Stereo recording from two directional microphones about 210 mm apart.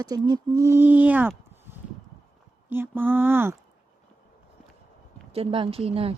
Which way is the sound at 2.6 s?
10° right (ahead or behind).